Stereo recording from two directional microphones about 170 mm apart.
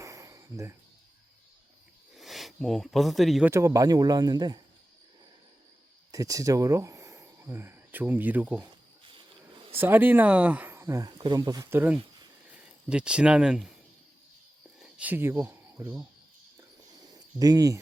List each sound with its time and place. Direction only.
0.0 s a sound: 20° right (ahead or behind)
2.1 s speech: centre (ahead or behind)
3.5 s speech: 20° right (ahead or behind)
6.1 s speech: 20° right (ahead or behind)
9.7 s speech: 10° right (ahead or behind)
14.8 s speech: 5° right (ahead or behind)
16.6 s a sound: 20° right (ahead or behind)